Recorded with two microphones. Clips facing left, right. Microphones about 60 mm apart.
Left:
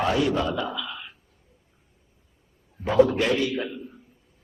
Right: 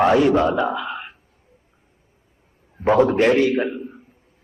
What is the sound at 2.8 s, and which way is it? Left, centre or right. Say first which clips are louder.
A man's voice: right 4 dB; right.